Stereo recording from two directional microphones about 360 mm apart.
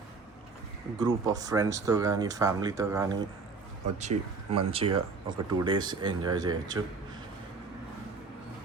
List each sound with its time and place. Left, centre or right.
0.9 s speech: centre